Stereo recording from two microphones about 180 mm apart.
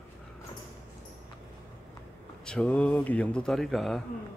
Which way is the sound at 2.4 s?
5° left (ahead or behind).